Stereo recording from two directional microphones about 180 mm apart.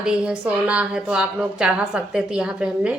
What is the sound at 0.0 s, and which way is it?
A woman's voice, 5° right (ahead or behind).